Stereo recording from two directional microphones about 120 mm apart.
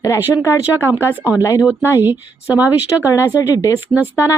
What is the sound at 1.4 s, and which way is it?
Speech, 25° left (ahead or behind).